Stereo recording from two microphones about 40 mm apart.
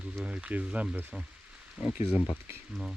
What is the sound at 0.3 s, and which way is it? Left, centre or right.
Speech, right.